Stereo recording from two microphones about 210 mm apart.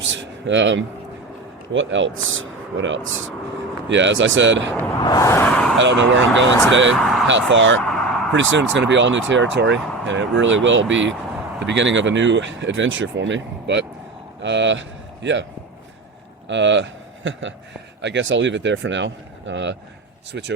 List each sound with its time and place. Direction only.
0.1 s speech: 60° right (ahead or behind)
4.9 s speech: 15° left (ahead or behind)
5.7 s speech: 60° right (ahead or behind)
6.9 s speech: centre (ahead or behind)
7.3 s speech: 60° right (ahead or behind)
7.8 s a sound: 5° left (ahead or behind)
8.3 s speech: 65° right (ahead or behind)
16.5 s speech: 60° right (ahead or behind)